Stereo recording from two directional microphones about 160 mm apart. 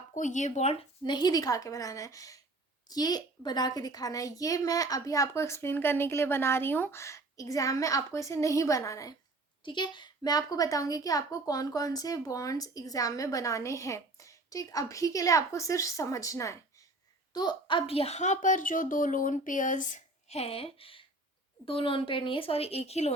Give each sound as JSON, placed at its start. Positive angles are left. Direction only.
{"t": 0.1, "sound": "a woman's voice", "side_deg": 50}